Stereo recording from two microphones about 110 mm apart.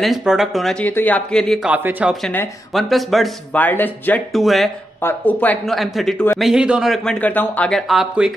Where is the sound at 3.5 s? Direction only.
15° left (ahead or behind).